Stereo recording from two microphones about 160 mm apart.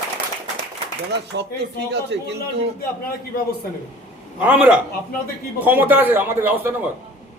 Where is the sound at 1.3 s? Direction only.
90° right.